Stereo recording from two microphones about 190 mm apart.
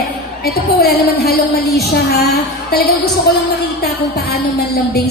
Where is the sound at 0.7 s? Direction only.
55° left (ahead or behind).